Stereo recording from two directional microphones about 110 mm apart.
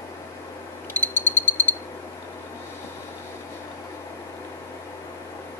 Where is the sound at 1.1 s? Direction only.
15° left (ahead or behind).